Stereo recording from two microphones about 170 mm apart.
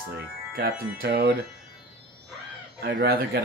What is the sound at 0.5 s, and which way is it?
Speech, 70° right (ahead or behind).